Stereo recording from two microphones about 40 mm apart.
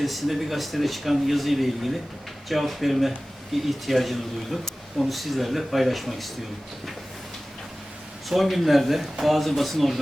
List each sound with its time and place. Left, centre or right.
0.0 s speech: centre
8.3 s speech: centre